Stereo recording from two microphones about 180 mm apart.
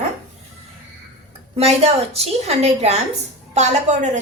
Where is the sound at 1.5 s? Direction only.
35° right (ahead or behind).